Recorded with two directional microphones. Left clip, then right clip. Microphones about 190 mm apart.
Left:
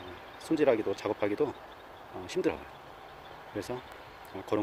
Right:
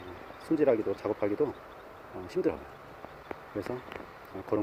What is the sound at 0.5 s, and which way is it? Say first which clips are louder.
Speech: even; 10° left (ahead or behind).